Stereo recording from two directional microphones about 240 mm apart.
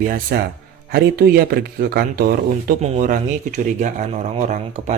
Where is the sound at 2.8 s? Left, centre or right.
Right.